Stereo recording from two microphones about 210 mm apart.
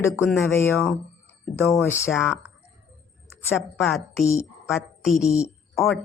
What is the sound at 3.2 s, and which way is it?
Speech, 10° left (ahead or behind).